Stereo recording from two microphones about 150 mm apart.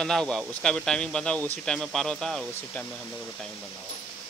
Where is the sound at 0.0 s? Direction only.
5° left (ahead or behind).